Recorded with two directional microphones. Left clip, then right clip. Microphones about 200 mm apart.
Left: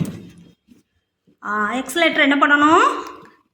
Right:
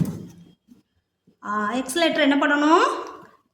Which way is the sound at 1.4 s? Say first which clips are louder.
Left 4 dB; 5° right (ahead or behind).